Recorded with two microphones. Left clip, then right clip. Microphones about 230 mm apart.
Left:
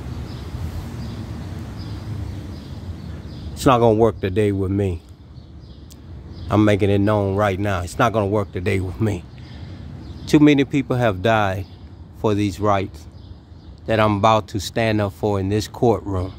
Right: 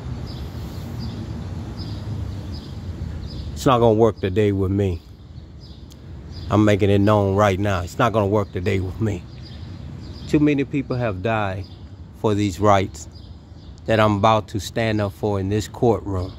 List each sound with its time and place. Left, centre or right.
3.5 s speech: centre
6.5 s speech: centre
10.2 s speech: centre